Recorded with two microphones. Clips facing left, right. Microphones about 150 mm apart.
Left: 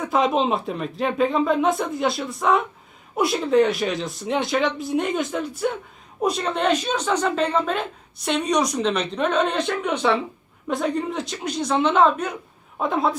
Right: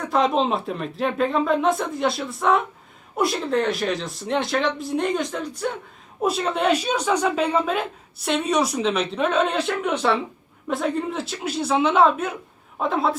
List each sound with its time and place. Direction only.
0.0 s a woman's voice: centre (ahead or behind)